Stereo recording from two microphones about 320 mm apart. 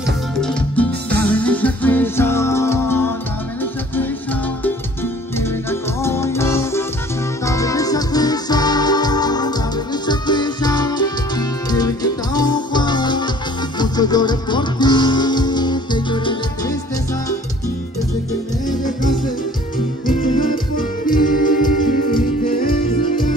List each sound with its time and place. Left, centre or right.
0.4 s music: centre
5.4 s music: centre
20.1 s music: left